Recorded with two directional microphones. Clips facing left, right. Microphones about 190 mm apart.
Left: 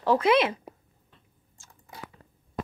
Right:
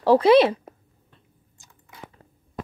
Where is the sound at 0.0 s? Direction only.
35° right (ahead or behind).